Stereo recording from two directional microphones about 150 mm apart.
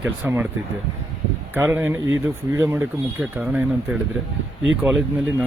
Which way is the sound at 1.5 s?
15° right (ahead or behind).